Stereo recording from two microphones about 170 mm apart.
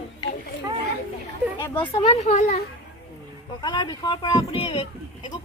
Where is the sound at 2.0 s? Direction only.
40° left (ahead or behind).